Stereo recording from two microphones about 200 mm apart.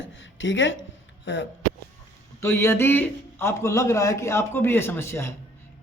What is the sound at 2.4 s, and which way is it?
A man's voice, 10° left (ahead or behind).